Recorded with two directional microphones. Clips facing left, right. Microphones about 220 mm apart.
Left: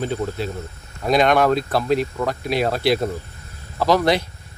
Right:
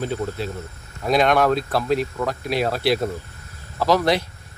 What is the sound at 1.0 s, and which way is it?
A man's voice, centre (ahead or behind).